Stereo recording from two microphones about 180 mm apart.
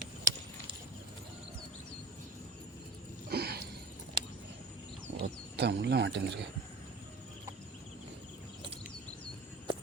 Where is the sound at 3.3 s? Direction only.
60° right (ahead or behind).